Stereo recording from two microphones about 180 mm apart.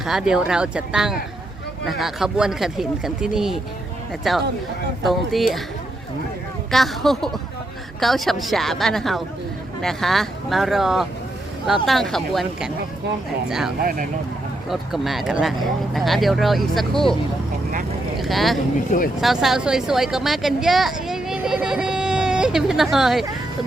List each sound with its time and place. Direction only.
0.0 s speech: 5° right (ahead or behind)
6.7 s speech: centre (ahead or behind)
18.2 s speech: centre (ahead or behind)
18.9 s speech: 50° left (ahead or behind)
19.2 s a woman's voice: centre (ahead or behind)